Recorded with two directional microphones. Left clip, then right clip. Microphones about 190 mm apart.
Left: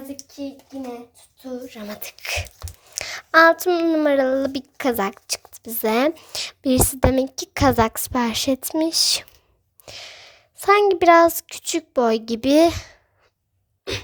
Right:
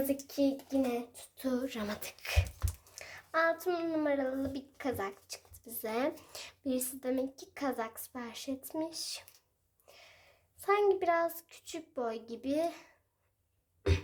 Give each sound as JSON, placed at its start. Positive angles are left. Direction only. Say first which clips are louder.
{"t": 1.5, "sound": "speech", "louder": "left 3 dB", "side_deg": -20}
{"t": 2.0, "sound": "speech", "louder": "left 11 dB", "side_deg": 30}
{"t": 2.9, "sound": "a woman's voice", "louder": "left 18 dB", "side_deg": 45}